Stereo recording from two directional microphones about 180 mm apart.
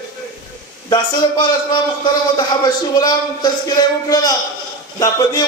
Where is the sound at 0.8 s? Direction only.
25° left (ahead or behind).